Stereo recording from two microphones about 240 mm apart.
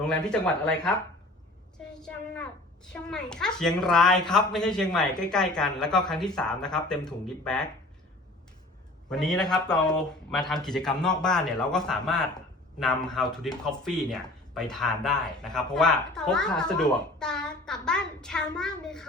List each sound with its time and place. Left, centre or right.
0.0 s a woman's voice: centre
2.0 s a woman's voice: centre
9.0 s a woman's voice: centre